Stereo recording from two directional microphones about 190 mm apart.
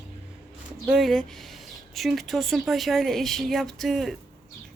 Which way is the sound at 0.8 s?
Centre (ahead or behind).